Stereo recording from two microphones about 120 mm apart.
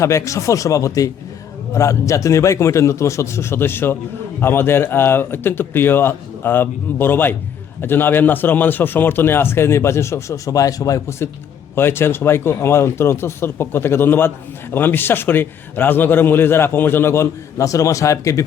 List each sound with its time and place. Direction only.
0.0 s speech: 25° left (ahead or behind)